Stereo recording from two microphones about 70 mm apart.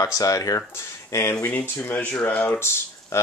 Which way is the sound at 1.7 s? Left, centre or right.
Left.